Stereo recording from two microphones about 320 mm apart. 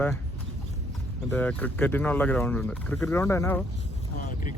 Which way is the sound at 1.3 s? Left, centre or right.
Centre.